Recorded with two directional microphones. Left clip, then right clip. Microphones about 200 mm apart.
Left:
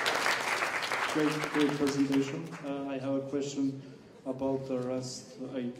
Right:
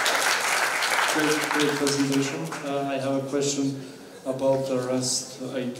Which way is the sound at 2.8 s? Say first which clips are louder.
Right 7 dB; 35° right (ahead or behind).